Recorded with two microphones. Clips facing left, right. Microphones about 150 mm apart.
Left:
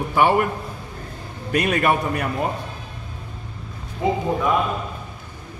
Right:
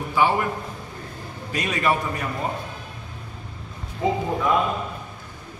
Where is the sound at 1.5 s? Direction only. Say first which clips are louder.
Left 4 dB; 60° left (ahead or behind).